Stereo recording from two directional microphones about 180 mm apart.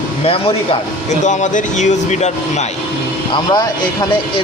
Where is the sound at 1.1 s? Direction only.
40° left (ahead or behind).